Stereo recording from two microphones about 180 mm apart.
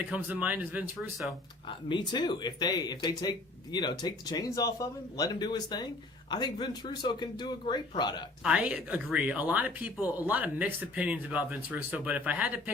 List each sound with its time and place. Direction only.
0.0 s speech: 10° right (ahead or behind)
1.9 s speech: 25° left (ahead or behind)
8.4 s speech: 5° right (ahead or behind)